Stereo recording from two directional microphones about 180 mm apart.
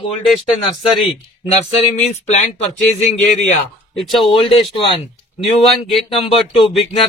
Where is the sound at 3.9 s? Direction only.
Centre (ahead or behind).